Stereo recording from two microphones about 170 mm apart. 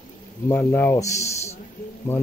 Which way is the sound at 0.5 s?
10° left (ahead or behind).